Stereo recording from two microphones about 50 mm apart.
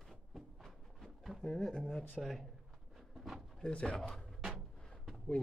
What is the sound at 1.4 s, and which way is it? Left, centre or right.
Speech, centre.